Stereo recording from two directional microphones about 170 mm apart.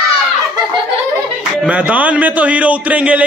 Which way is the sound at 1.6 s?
5° right (ahead or behind).